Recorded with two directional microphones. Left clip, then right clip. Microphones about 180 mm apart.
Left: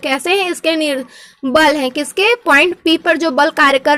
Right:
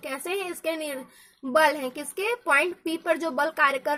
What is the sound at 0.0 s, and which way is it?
A woman's voice, 35° left (ahead or behind).